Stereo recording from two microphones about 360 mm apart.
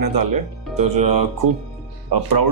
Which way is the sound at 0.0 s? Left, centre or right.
Right.